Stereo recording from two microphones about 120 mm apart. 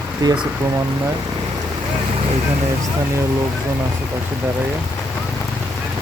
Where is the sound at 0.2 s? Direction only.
30° right (ahead or behind).